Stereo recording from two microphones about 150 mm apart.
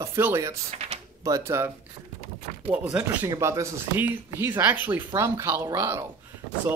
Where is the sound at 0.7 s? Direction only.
45° right (ahead or behind).